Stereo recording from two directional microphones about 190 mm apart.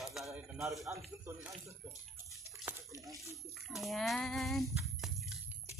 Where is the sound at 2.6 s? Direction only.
15° right (ahead or behind).